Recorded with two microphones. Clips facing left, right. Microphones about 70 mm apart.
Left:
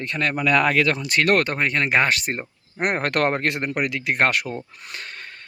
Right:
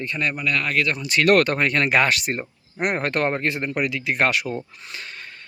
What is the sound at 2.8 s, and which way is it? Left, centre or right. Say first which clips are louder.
Speech: even; left.